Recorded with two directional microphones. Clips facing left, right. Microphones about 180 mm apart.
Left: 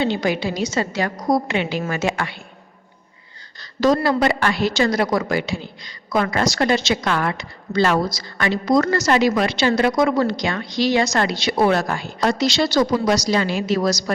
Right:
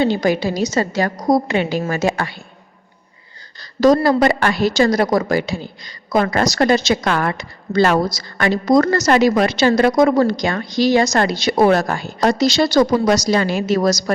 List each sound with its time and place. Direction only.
0.0 s a woman's voice: 40° right (ahead or behind)
3.6 s a woman's voice: 40° right (ahead or behind)